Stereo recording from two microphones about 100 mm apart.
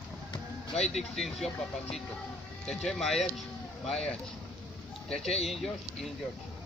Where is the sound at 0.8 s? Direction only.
90° left.